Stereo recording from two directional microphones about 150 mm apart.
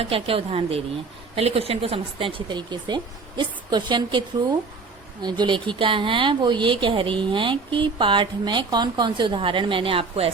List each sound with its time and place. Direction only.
0.0 s speech: 40° right (ahead or behind)
5.2 s speech: 30° right (ahead or behind)